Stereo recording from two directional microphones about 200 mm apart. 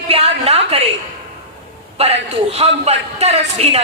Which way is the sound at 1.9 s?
30° right (ahead or behind).